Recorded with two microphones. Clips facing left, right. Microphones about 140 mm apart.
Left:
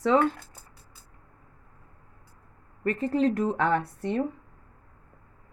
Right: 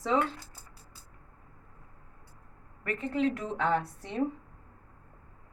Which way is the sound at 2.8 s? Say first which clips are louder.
Left 5 dB; 35° left (ahead or behind).